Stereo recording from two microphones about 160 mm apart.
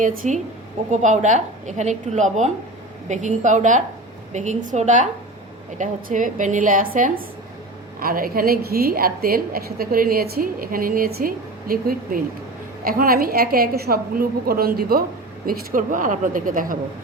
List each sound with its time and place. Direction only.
0.0 s a woman's voice: 60° right (ahead or behind)
15.4 s a woman's voice: 55° right (ahead or behind)